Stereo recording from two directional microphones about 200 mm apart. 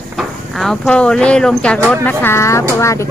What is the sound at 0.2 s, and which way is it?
Speech, centre (ahead or behind).